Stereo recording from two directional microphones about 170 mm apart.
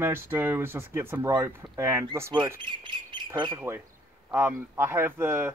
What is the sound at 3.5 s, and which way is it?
Speech, 15° right (ahead or behind).